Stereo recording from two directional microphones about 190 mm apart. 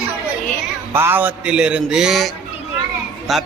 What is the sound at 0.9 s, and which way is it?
Music, 10° right (ahead or behind).